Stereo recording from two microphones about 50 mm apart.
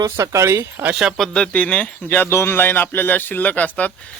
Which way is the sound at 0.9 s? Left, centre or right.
Centre.